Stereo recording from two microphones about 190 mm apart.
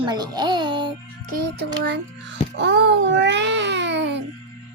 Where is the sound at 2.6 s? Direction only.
70° right (ahead or behind).